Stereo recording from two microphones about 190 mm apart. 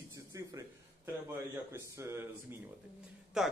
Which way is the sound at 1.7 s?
10° right (ahead or behind).